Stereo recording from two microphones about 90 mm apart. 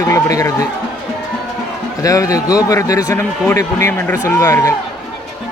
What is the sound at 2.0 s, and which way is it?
A man's voice, 40° left (ahead or behind).